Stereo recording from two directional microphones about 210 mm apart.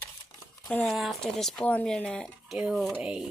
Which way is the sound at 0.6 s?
Centre (ahead or behind).